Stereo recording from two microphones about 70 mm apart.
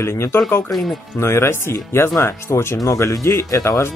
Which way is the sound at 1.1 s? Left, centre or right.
Left.